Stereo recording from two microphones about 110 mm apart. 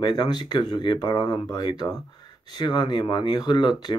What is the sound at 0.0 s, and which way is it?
Speech, 40° left (ahead or behind).